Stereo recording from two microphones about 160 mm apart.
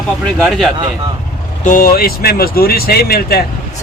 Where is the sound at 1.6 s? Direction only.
60° left (ahead or behind).